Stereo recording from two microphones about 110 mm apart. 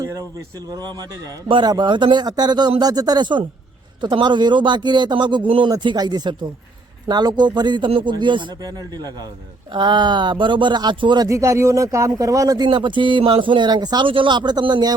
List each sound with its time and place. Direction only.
0.0 s speech: 35° right (ahead or behind)
8.6 s speech: 35° right (ahead or behind)
11.3 s speech: 30° right (ahead or behind)
12.6 s speech: 45° right (ahead or behind)